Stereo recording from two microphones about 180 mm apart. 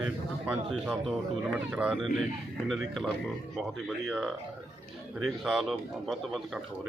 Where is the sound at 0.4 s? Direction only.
5° right (ahead or behind).